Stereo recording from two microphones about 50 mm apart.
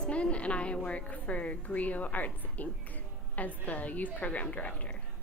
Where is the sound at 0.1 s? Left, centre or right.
Left.